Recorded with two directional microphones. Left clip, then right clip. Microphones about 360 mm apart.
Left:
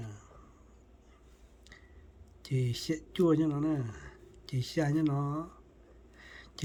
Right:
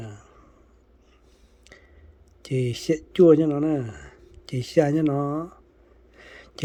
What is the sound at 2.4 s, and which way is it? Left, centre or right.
Speech, centre.